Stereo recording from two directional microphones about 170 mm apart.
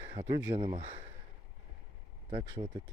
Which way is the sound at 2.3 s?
30° right (ahead or behind).